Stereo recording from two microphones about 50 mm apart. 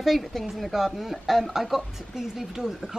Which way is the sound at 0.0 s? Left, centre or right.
Centre.